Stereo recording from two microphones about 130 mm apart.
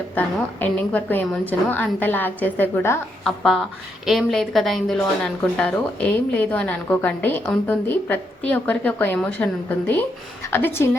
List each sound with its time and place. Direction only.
0.1 s speech: 15° left (ahead or behind)
3.2 s speech: centre (ahead or behind); by 10.8 s 20° left (ahead or behind)